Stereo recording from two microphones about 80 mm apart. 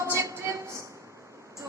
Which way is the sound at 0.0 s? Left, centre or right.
Right.